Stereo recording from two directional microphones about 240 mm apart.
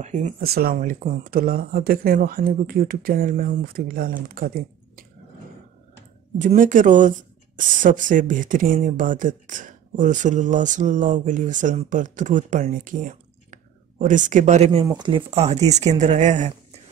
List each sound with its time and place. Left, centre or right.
0.0 s speech: right
6.3 s speech: right